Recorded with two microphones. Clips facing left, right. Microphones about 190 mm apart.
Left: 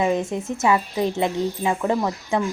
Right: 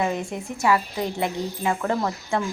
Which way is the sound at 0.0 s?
20° left (ahead or behind).